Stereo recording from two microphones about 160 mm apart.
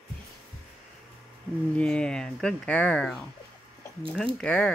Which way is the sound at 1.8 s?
5° left (ahead or behind).